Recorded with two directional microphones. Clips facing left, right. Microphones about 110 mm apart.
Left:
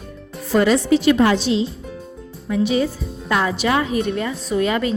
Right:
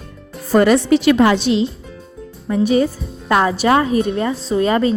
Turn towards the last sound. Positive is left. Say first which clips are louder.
# right 4 dB
turn(degrees=-35)  # may be behind; listen again after turning